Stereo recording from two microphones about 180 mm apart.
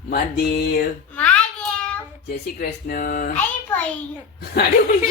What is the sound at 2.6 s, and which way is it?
Speech, 55° left (ahead or behind).